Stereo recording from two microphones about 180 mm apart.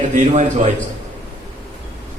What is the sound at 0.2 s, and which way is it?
Speech, 40° right (ahead or behind).